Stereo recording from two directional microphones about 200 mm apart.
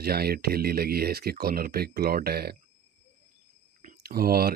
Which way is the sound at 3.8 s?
50° right (ahead or behind).